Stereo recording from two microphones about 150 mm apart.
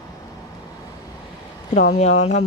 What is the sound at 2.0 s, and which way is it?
Speech, 45° left (ahead or behind).